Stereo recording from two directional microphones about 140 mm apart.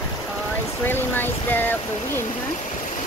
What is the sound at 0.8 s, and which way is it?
Speech, 15° left (ahead or behind).